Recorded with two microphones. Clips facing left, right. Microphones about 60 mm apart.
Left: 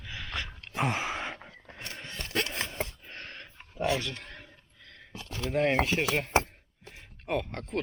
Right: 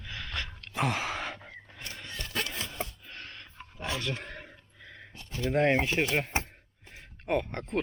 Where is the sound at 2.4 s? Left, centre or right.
Left.